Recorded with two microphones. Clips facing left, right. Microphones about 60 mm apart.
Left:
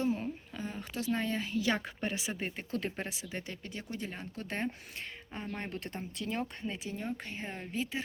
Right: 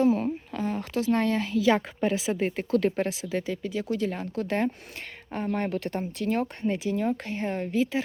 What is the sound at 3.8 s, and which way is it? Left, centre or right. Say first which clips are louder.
Speech: right 10 dB; right.